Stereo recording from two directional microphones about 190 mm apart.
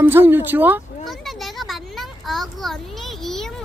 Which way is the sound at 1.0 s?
Centre (ahead or behind).